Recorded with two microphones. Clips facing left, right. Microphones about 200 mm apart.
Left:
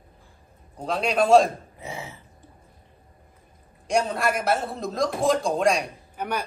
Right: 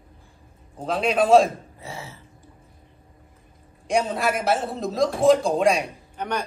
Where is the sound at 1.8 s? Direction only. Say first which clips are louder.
Left 2 dB; 15° left (ahead or behind).